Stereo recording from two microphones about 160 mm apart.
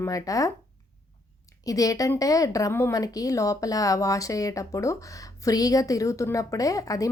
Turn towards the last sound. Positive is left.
turn(degrees=20)  # may be behind; listen again after turning